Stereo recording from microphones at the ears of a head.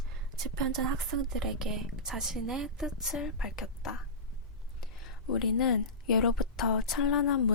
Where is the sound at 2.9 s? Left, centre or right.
Left.